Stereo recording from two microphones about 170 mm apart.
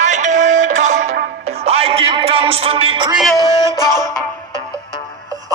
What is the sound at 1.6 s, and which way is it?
Music, 35° right (ahead or behind).